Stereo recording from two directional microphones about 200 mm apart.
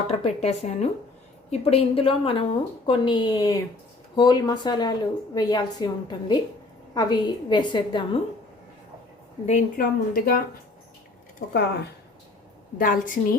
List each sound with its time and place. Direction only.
0.1 s a woman's voice: 30° left (ahead or behind)
9.5 s speech: 40° left (ahead or behind)
12.8 s speech: 45° left (ahead or behind)